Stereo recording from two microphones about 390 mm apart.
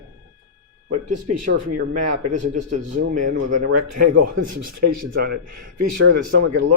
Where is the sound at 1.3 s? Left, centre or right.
Right.